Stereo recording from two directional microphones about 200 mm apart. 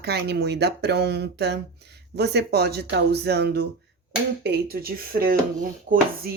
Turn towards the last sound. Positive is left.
turn(degrees=-45)  # may be behind; listen again after turning